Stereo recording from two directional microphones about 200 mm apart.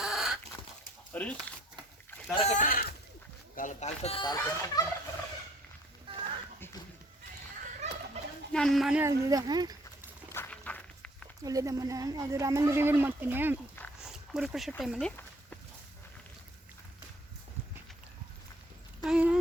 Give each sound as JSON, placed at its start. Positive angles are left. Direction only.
{"t": 0.0, "sound": "a sound", "side_deg": -5}
{"t": 1.1, "sound": "speech", "side_deg": 5}
{"t": 2.3, "sound": "speech", "side_deg": 35}
{"t": 8.5, "sound": "speech", "side_deg": 0}
{"t": 10.3, "sound": "walk", "side_deg": 10}
{"t": 11.4, "sound": "speech", "side_deg": -15}
{"t": 14.0, "sound": "dog", "side_deg": 0}
{"t": 14.7, "sound": "speech", "side_deg": 0}
{"t": 19.0, "sound": "a sound", "side_deg": -5}